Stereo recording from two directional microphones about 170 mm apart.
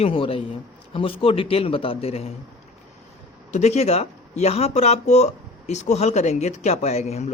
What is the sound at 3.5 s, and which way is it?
Speech, 40° left (ahead or behind).